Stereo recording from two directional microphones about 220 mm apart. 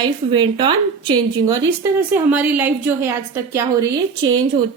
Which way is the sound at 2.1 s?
5° right (ahead or behind).